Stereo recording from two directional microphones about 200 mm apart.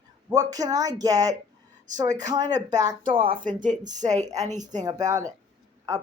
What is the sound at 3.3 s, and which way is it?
A woman's voice, 40° right (ahead or behind).